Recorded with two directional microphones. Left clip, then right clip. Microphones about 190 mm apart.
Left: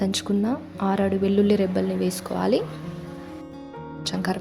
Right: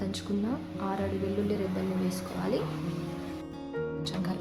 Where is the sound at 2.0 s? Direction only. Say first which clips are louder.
Left 9 dB; 40° left (ahead or behind).